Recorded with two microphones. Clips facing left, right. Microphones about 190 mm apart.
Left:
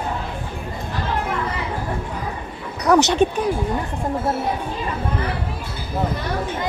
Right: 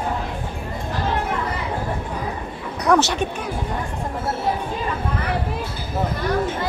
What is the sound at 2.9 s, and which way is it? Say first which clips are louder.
Speech: left 2 dB; 5° left (ahead or behind).